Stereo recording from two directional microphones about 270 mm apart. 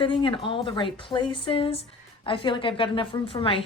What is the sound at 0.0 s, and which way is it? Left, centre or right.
Speech, centre.